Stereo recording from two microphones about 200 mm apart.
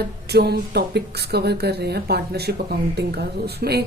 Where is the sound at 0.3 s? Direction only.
55° right (ahead or behind).